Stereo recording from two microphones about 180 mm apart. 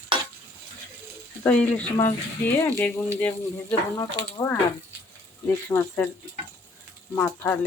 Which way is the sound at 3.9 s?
15° left (ahead or behind).